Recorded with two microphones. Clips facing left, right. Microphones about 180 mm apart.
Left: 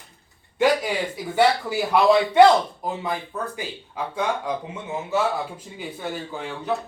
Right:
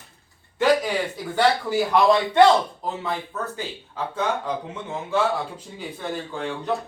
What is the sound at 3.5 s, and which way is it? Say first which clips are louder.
Speech: even; 10° left (ahead or behind).